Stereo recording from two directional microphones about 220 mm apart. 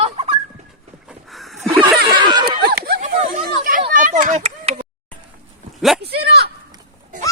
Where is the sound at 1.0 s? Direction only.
Centre (ahead or behind).